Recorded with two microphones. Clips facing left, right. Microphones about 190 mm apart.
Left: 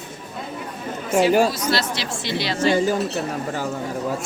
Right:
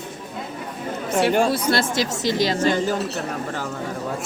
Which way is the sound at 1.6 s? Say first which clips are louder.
Right 3 dB; 50° right (ahead or behind).